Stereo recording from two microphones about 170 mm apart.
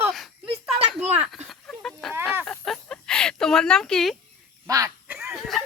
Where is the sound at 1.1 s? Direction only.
10° right (ahead or behind).